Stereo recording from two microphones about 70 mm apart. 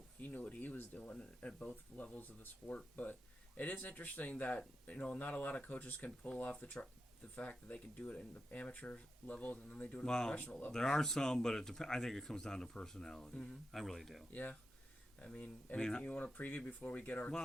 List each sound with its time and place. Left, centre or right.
0.2 s speech: left; by 14.3 s centre
15.2 s speech: centre